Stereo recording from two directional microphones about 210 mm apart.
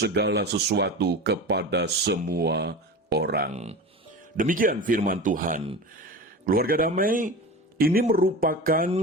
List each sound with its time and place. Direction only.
0.0 s speech: 55° right (ahead or behind)
3.5 s speech: 30° right (ahead or behind)